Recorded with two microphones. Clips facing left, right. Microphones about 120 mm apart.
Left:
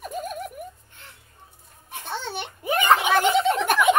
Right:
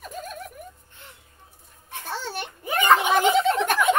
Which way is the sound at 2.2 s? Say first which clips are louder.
Left 2 dB; 5° right (ahead or behind).